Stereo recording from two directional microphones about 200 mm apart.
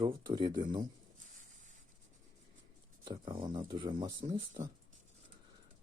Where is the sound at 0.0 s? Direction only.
25° right (ahead or behind).